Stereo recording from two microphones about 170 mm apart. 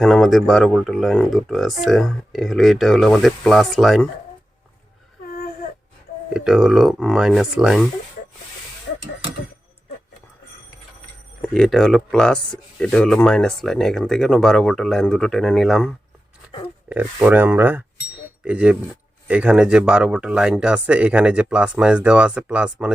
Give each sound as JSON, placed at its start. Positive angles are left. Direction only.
{"t": 0.0, "sound": "speech", "side_deg": 0}
{"t": 6.3, "sound": "speech", "side_deg": -5}
{"t": 11.4, "sound": "speech", "side_deg": 5}
{"t": 16.9, "sound": "speech", "side_deg": -10}